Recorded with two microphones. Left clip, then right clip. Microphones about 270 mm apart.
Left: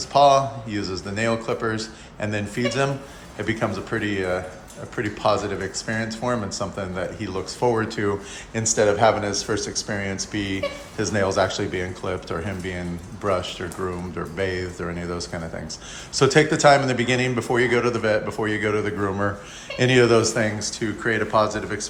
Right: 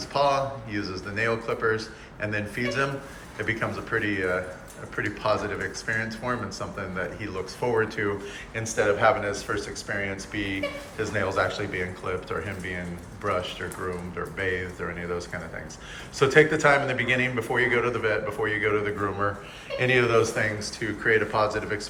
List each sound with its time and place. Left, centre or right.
0.0 s speech: centre